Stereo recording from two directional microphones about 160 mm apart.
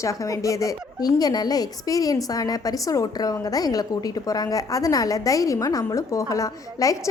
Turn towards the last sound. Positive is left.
turn(degrees=20)  # may be behind; listen again after turning